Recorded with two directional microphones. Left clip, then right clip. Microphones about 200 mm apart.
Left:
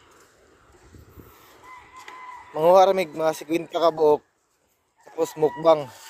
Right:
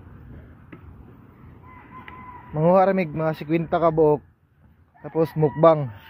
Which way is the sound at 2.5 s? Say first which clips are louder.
Left 2 dB; 20° left (ahead or behind).